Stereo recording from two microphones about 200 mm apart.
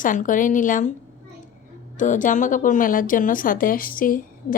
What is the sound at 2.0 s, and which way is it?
Speech, 40° left (ahead or behind).